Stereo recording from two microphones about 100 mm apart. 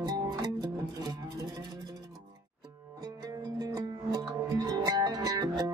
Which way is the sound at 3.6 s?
40° right (ahead or behind).